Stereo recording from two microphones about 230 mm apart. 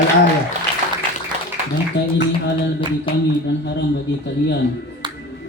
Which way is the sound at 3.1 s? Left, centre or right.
Left.